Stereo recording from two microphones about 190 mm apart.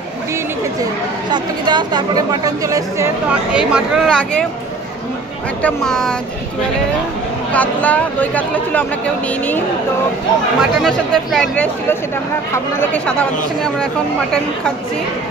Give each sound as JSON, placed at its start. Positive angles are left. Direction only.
{"t": 1.3, "sound": "a woman's voice", "side_deg": -20}
{"t": 3.5, "sound": "speech", "side_deg": -5}
{"t": 5.6, "sound": "speech", "side_deg": 5}
{"t": 7.5, "sound": "speech", "side_deg": 10}
{"t": 10.6, "sound": "speech", "side_deg": 0}